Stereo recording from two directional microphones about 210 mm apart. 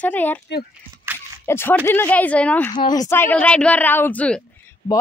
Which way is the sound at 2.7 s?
20° left (ahead or behind).